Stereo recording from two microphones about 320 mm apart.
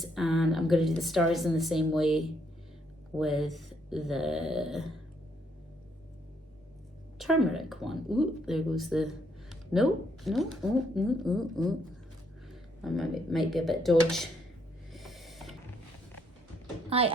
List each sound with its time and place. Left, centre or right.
0.0 s speech: centre
3.2 s speech: centre
7.2 s speech: centre
12.5 s a sound: centre
13.5 s speech: centre
14.9 s a sound: centre
16.9 s speech: centre